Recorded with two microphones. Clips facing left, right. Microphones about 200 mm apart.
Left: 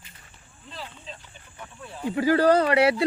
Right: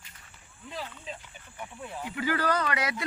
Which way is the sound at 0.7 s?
15° right (ahead or behind).